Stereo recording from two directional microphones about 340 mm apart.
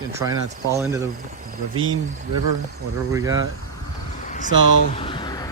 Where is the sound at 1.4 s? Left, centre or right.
Right.